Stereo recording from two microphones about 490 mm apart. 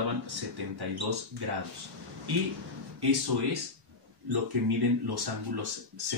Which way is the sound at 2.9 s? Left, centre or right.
Right.